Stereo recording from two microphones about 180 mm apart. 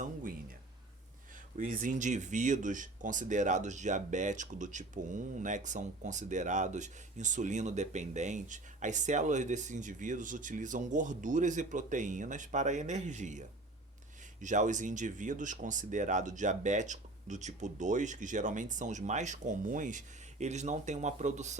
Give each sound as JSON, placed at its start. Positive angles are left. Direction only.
{"t": 0.0, "sound": "a sound", "side_deg": -50}
{"t": 1.5, "sound": "speech", "side_deg": -45}
{"t": 14.4, "sound": "speech", "side_deg": -45}